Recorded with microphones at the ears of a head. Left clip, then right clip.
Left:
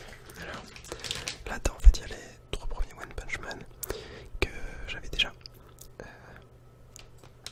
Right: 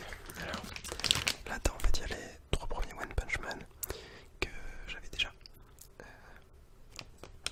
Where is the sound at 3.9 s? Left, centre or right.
Left.